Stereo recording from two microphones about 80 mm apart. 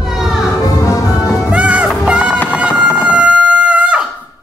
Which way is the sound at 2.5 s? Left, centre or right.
Centre.